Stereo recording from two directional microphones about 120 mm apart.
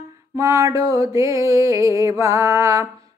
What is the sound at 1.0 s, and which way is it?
Mantra, 25° right (ahead or behind).